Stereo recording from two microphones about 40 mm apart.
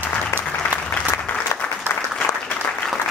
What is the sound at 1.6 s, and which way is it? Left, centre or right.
Applause, left.